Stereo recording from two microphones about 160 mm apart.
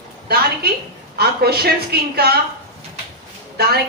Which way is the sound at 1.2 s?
80° right.